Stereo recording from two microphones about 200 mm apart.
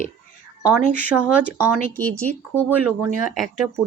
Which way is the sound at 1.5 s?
10° right (ahead or behind).